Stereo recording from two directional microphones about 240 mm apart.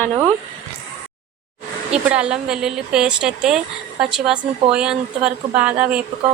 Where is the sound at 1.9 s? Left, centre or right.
Centre.